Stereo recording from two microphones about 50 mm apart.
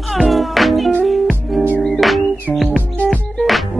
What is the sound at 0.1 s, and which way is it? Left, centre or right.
Music, centre.